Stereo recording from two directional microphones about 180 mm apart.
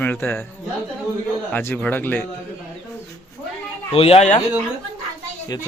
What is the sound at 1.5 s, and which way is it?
Speech, 10° left (ahead or behind).